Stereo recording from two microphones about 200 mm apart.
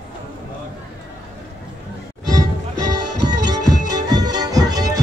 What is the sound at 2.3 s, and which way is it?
Music, 20° right (ahead or behind).